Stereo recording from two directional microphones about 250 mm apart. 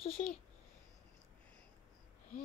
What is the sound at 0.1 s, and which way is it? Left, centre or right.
Speech, centre.